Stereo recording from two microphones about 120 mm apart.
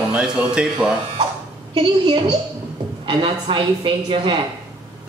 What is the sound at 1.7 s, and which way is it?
Speech, 50° right (ahead or behind).